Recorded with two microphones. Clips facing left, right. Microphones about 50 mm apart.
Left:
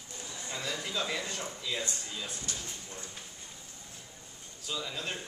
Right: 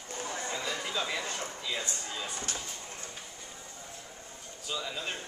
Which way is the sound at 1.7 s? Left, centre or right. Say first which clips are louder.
Right 1 dB; right.